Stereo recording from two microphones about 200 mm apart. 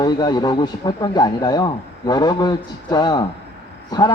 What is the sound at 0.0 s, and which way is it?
Speech, 20° left (ahead or behind).